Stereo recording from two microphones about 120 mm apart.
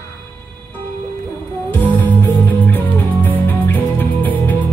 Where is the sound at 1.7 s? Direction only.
15° left (ahead or behind).